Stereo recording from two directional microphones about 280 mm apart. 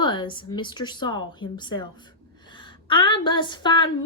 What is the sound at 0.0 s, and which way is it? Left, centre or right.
A woman's voice, centre.